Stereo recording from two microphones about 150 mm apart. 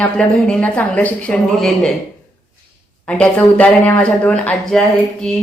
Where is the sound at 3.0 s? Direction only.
10° left (ahead or behind).